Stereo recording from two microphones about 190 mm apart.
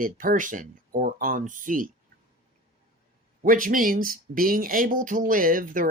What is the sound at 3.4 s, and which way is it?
Speech, 45° right (ahead or behind).